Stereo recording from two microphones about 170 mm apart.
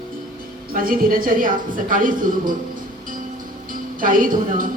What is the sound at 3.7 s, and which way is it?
Speech, 55° right (ahead or behind).